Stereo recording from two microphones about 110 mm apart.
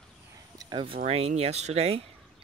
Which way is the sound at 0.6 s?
45° right (ahead or behind).